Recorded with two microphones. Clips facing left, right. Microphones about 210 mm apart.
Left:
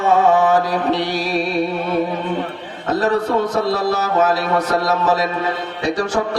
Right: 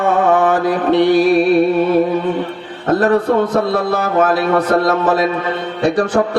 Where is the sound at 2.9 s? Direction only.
55° right (ahead or behind).